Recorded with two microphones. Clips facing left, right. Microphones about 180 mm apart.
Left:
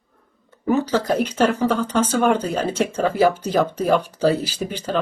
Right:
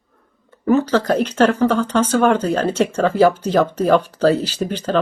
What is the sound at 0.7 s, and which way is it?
Speech, 10° left (ahead or behind).